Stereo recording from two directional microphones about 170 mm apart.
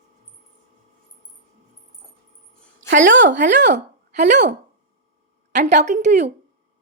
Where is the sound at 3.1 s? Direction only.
90° right.